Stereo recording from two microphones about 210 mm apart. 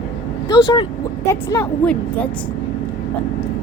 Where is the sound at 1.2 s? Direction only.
15° left (ahead or behind).